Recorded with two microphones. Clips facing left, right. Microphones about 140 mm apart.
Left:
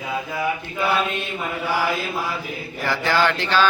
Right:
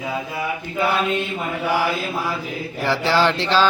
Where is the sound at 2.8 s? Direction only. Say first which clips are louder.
Right 2 dB; 25° right (ahead or behind).